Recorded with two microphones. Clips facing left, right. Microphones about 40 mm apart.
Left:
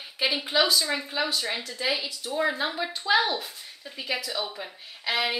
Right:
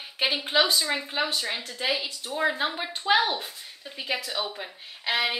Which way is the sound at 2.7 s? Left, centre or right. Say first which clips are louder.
Even; right.